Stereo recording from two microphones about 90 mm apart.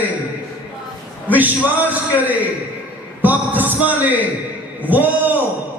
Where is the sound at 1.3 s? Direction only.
20° right (ahead or behind).